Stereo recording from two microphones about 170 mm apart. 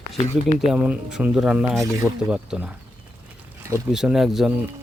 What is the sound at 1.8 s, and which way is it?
Speech, 15° right (ahead or behind).